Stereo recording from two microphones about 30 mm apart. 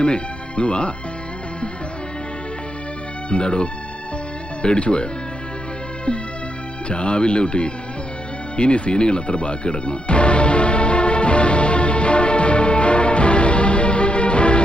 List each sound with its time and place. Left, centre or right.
0.0 s speech: left
3.2 s speech: left
6.8 s speech: left
8.5 s music: left